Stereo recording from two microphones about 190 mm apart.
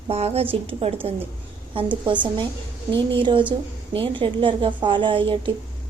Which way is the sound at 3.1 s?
25° right (ahead or behind).